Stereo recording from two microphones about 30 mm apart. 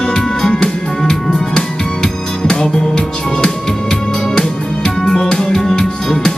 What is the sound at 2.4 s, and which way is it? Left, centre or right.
Music, left.